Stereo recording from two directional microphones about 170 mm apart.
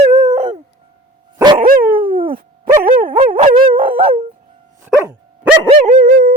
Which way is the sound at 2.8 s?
55° right (ahead or behind).